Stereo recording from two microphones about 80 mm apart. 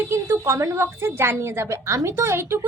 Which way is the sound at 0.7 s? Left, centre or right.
Right.